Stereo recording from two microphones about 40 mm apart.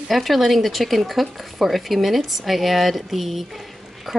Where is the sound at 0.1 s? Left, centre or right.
Centre.